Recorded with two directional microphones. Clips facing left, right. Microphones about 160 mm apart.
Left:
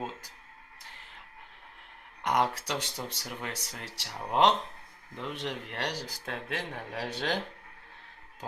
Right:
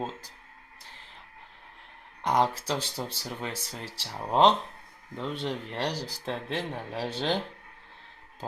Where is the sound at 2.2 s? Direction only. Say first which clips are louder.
Right 3 dB; 30° right (ahead or behind).